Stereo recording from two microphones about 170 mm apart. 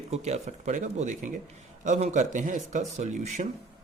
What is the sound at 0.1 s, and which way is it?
Speech, 40° right (ahead or behind).